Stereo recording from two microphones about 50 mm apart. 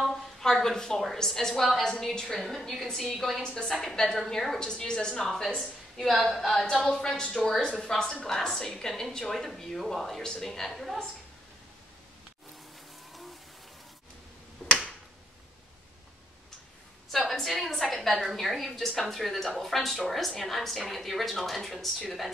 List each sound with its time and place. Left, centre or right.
0.1 s a woman's voice: centre
3.4 s a woman's voice: centre
14.6 s finger snapping: left
17.1 s a woman's voice: centre